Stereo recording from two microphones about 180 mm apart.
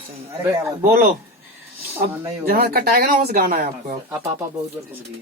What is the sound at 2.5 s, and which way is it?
Speech, 60° right (ahead or behind).